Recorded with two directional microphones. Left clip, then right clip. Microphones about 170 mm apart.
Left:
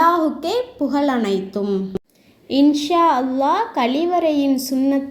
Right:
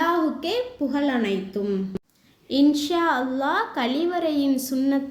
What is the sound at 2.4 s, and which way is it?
A woman's voice, 10° left (ahead or behind).